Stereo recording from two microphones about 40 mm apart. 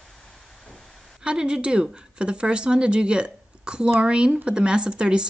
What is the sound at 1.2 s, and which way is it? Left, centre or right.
A woman's voice, right.